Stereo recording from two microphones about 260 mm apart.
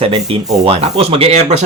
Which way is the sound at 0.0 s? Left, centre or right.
Right.